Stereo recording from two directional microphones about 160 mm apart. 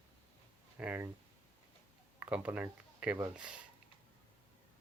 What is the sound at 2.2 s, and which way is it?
Speech, 10° right (ahead or behind).